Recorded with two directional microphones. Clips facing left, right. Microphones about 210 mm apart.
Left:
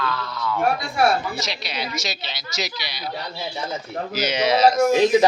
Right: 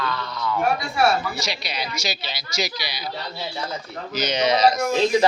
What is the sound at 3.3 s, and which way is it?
Speech, 20° left (ahead or behind).